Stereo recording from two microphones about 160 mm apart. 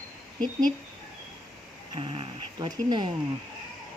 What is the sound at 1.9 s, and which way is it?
Speech, 30° right (ahead or behind).